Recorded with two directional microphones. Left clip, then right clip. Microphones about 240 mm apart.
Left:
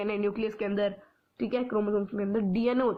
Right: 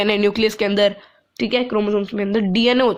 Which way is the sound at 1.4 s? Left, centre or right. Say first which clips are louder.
Right 10 dB; right.